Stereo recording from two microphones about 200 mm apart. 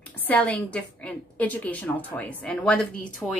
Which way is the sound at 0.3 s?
5° left (ahead or behind).